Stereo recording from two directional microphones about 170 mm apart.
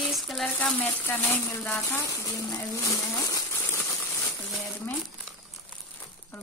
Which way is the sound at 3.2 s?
20° left (ahead or behind).